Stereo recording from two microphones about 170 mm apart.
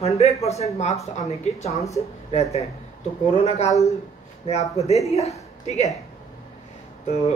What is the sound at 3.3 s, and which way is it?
Speech, 40° left (ahead or behind).